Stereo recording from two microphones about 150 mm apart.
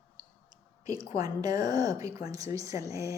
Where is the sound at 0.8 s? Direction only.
25° right (ahead or behind).